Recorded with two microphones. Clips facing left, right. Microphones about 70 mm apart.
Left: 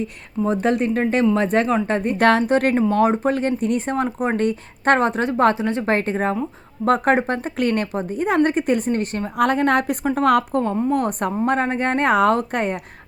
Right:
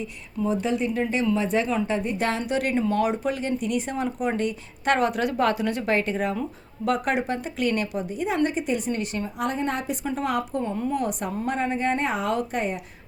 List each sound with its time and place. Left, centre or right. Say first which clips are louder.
0.0 s speech: left 5 dB; left
2.5 s speech: left 6 dB; left
9.4 s a woman's voice: left 10 dB; left